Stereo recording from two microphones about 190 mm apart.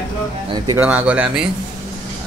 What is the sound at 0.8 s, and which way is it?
Speech, 5° right (ahead or behind).